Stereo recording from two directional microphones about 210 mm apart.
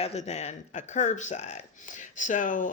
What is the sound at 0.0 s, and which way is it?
Speech, 30° left (ahead or behind).